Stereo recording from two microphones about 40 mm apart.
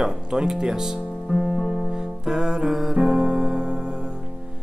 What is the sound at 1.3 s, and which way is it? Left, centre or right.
Music, centre.